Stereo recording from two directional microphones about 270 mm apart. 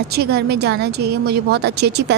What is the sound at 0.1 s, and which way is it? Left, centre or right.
A woman's voice, right.